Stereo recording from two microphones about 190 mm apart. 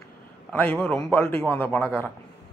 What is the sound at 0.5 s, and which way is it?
Speech, 10° left (ahead or behind).